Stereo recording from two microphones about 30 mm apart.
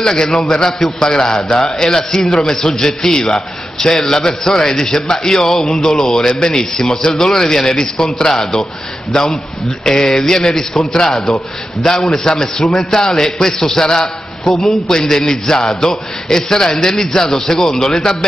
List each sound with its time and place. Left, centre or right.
0.0 s a man's voice: centre
3.3 s a man's voice: centre
4.9 s a man's voice: left